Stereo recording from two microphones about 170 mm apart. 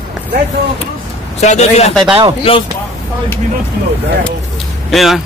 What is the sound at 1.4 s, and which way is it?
Speech, 40° left (ahead or behind).